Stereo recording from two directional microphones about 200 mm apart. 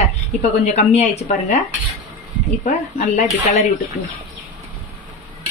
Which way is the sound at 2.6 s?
35° left (ahead or behind).